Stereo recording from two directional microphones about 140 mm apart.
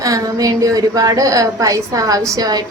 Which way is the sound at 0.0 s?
25° right (ahead or behind).